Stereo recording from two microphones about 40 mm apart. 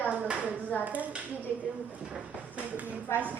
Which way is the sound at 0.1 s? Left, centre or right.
Right.